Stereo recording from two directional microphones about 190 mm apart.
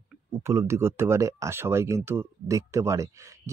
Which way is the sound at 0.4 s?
15° right (ahead or behind).